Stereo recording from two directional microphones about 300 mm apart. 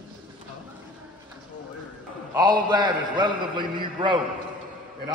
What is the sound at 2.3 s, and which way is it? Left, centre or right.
A man's voice, centre.